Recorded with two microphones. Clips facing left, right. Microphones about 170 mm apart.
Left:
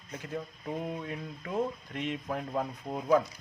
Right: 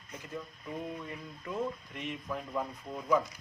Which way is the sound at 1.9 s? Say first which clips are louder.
Left 4 dB; 65° left (ahead or behind).